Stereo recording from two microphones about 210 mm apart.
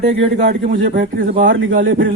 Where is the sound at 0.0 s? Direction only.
50° right (ahead or behind).